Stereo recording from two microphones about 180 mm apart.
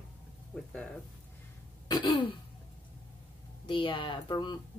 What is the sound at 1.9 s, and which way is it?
Throat clearing, 25° left (ahead or behind).